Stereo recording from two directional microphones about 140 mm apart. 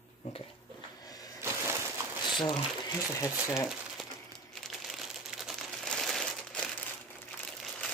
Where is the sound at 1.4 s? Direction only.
20° right (ahead or behind).